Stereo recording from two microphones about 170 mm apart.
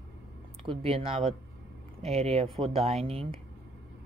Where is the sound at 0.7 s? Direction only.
35° right (ahead or behind).